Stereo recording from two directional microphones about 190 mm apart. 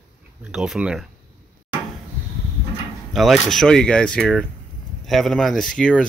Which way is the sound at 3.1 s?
Centre (ahead or behind).